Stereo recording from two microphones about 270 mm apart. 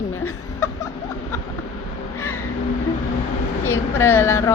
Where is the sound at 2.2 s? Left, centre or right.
Left.